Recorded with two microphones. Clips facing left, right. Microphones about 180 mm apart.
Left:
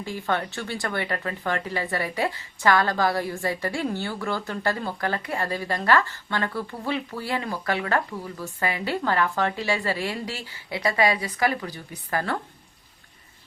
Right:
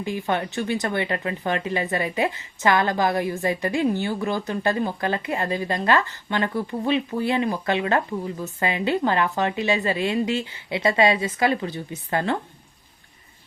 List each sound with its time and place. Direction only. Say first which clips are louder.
0.0 s speech: right 2 dB; 15° right (ahead or behind)